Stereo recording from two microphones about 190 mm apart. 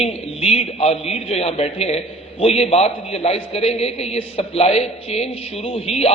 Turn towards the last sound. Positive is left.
turn(degrees=35)  # may be behind; listen again after turning